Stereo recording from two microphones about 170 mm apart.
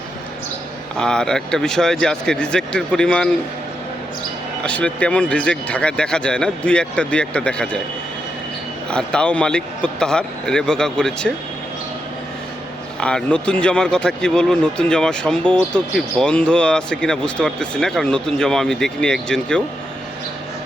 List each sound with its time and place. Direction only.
0.9 s speech: 5° left (ahead or behind)
4.6 s speech: 5° left (ahead or behind)
8.9 s speech: 5° left (ahead or behind)
13.0 s speech: 5° left (ahead or behind)